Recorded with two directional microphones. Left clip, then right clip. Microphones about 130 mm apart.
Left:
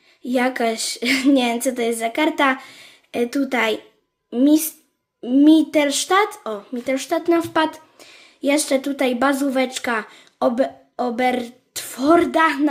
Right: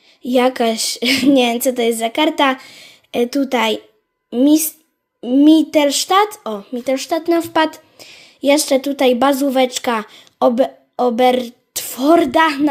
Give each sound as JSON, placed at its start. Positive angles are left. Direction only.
{"t": 0.2, "sound": "speech", "side_deg": -40}